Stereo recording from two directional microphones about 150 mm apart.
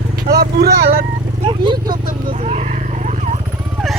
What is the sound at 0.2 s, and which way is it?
Speech, 80° right.